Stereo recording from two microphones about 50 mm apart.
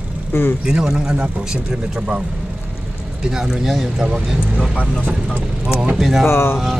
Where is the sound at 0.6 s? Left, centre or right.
Centre.